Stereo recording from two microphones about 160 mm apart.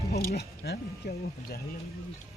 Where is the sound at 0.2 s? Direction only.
90° left.